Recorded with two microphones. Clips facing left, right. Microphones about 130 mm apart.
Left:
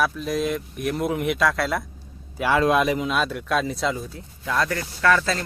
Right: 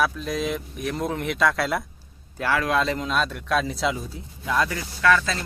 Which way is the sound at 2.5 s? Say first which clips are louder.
Left 4 dB; 20° left (ahead or behind).